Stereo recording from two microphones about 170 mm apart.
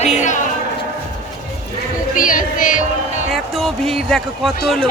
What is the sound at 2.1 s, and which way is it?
Music, 50° left (ahead or behind).